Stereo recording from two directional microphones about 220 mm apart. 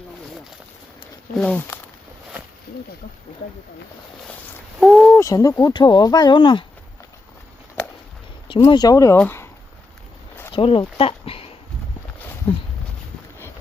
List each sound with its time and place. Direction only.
1.4 s speech: 5° left (ahead or behind)
4.8 s speech: centre (ahead or behind); by 6.7 s 20° left (ahead or behind)
8.4 s speech: 20° left (ahead or behind)
10.5 s speech: 25° left (ahead or behind)
12.4 s speech: 25° left (ahead or behind)